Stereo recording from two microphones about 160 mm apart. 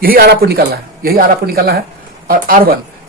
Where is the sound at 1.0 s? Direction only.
70° right (ahead or behind).